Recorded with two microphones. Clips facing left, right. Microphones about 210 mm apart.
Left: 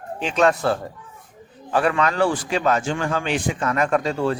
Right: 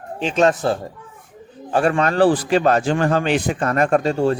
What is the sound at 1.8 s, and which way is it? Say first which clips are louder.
A man's voice: right 4 dB; 45° right (ahead or behind).